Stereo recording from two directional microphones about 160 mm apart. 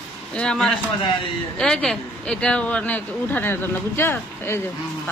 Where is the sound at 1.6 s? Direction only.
5° left (ahead or behind).